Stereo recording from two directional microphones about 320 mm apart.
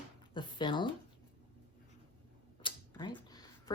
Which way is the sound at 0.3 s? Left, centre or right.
Centre.